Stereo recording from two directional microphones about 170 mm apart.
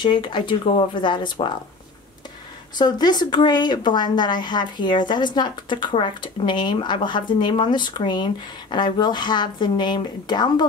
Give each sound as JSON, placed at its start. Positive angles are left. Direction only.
{"t": 0.0, "sound": "speech", "side_deg": 25}
{"t": 2.8, "sound": "speech", "side_deg": 25}